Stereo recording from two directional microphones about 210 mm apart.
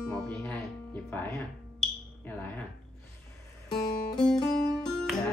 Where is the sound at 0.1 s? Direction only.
5° left (ahead or behind).